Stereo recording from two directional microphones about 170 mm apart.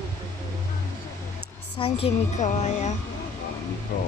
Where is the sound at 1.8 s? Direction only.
40° left (ahead or behind).